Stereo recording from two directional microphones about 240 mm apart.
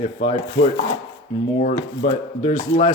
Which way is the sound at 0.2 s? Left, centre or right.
Left.